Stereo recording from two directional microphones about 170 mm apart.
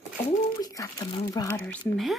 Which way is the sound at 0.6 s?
20° left (ahead or behind).